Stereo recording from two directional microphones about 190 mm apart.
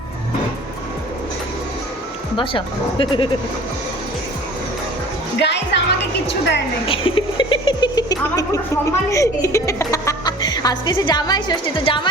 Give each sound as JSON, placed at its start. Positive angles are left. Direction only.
{"t": 2.3, "sound": "speech", "side_deg": 25}
{"t": 5.4, "sound": "music", "side_deg": 65}
{"t": 6.8, "sound": "a sound", "side_deg": 30}